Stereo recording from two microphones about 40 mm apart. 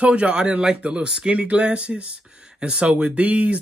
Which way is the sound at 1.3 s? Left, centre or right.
Right.